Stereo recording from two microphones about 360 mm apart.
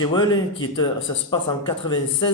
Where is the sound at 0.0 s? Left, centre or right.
Centre.